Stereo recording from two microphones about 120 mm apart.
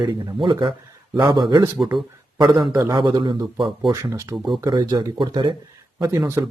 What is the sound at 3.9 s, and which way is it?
Speech, 25° right (ahead or behind).